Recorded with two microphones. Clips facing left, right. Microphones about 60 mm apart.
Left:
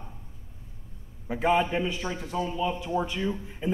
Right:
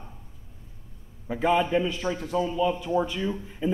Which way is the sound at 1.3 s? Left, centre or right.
Left.